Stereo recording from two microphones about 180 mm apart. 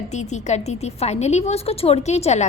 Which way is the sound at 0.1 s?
40° left (ahead or behind).